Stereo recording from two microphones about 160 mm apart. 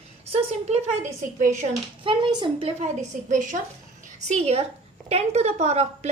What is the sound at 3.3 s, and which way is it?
A woman's voice, 50° right (ahead or behind).